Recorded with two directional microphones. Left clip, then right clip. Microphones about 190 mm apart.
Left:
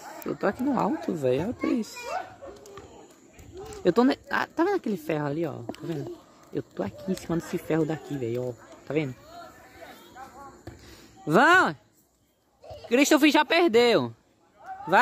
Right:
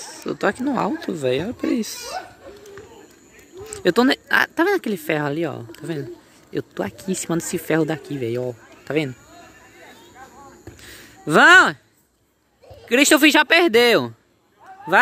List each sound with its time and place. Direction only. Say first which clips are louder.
0.3 s speech: right 5 dB; centre (ahead or behind)
1.6 s speech: right 5 dB; 10° right (ahead or behind)
3.7 s speech: right 5 dB; centre (ahead or behind)
10.8 s a sound: right 7 dB; centre (ahead or behind)
12.8 s speech: right 6 dB; centre (ahead or behind)